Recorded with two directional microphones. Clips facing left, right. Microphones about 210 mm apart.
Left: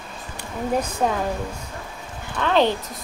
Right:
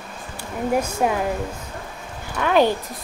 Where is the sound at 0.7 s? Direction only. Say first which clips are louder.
Right 1 dB; 10° right (ahead or behind).